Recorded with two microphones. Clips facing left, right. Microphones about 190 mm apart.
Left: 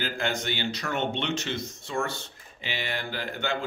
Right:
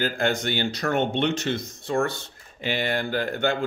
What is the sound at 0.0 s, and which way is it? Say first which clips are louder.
Speech: right 5 dB; 50° right (ahead or behind).